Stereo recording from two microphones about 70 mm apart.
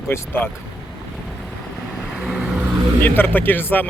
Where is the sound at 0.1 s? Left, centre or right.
Left.